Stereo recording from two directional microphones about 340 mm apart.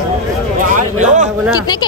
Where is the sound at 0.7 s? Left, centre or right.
Right.